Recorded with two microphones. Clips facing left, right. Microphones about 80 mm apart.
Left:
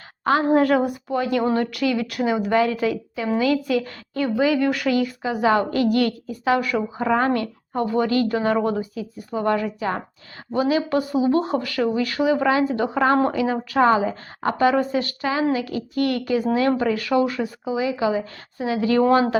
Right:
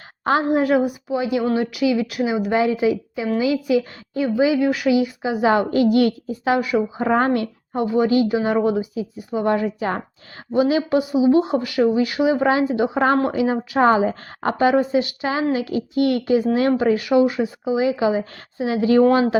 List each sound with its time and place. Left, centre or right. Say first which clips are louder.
0.5 s a woman's voice: even; centre
2.6 s a woman's voice: right 2 dB; centre
7.0 s speech: even; right
7.7 s a woman's voice: right 3 dB; centre